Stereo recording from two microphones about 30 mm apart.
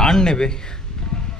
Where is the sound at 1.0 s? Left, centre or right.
Left.